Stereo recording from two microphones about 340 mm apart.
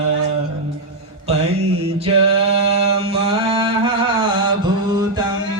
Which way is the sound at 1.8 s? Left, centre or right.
Centre.